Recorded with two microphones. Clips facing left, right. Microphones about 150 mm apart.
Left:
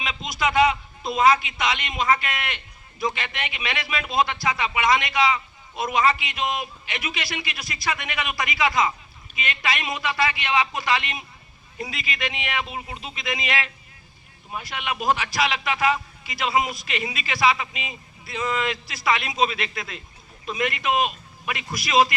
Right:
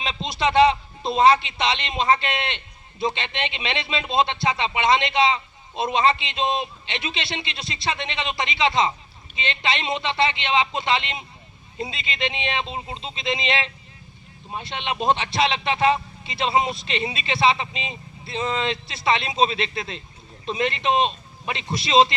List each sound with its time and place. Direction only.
0.0 s a man's voice: 30° right (ahead or behind)